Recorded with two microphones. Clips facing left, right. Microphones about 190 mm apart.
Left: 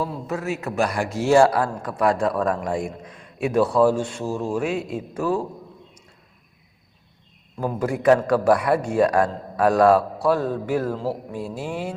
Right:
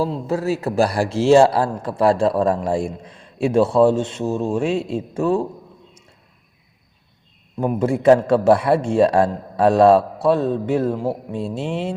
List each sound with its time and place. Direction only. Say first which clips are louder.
0.0 s a man's voice: right 6 dB; 30° right (ahead or behind)
7.6 s a man's voice: right 4 dB; 25° right (ahead or behind)